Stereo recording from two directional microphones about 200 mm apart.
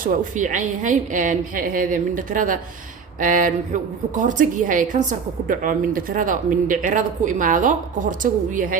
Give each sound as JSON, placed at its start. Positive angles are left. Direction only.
{"t": 0.0, "sound": "a woman's voice", "side_deg": -40}